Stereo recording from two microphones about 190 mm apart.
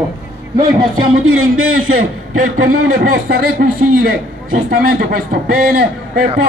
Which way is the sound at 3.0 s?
50° right (ahead or behind).